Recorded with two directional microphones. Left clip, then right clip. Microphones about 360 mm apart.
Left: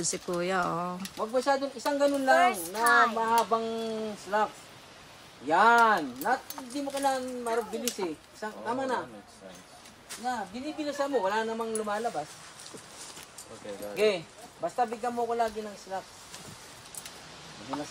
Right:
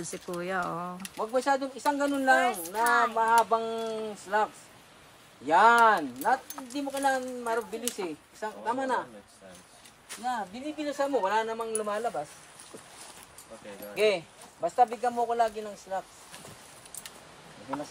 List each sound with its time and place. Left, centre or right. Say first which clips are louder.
0.0 s speech: left 4 dB; centre
1.1 s a man's voice: right 1 dB; right
5.5 s a man's voice: right 1 dB; right
10.0 s a man's voice: right 1 dB; right
13.9 s a man's voice: right 1 dB; right